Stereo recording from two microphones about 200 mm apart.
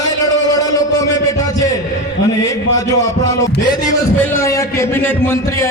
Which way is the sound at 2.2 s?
15° left (ahead or behind).